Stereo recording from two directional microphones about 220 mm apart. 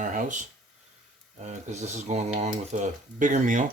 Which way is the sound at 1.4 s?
30° right (ahead or behind).